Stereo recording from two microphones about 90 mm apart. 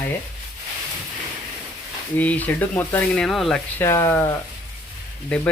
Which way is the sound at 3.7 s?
30° left (ahead or behind).